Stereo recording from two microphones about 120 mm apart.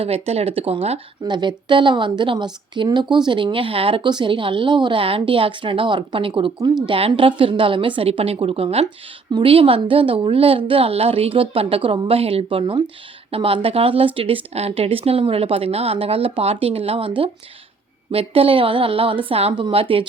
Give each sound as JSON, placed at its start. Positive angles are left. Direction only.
{"t": 0.0, "sound": "speech", "side_deg": -55}
{"t": 1.2, "sound": "a woman's voice", "side_deg": -40}